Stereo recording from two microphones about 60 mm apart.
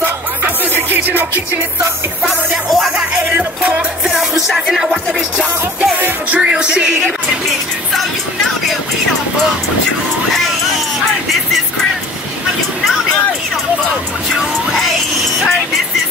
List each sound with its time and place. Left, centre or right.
0.7 s music: right
2.2 s music: centre
3.3 s music: right
4.1 s music: centre
5.9 s music: right
6.4 s music: centre